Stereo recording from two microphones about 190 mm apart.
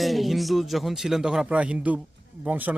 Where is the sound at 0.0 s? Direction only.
Centre (ahead or behind).